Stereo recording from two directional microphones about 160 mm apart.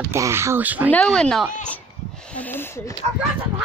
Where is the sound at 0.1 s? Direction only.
15° right (ahead or behind).